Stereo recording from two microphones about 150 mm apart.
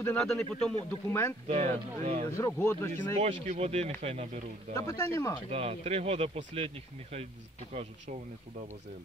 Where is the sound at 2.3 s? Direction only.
20° left (ahead or behind).